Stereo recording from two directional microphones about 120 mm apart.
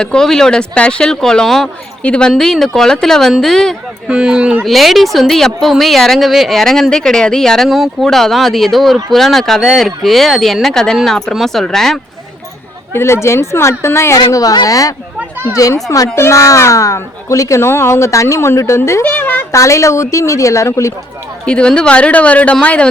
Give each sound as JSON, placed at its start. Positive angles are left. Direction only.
{"t": 0.0, "sound": "speech", "side_deg": 5}
{"t": 12.9, "sound": "a woman's voice", "side_deg": 20}
{"t": 21.4, "sound": "speech", "side_deg": 10}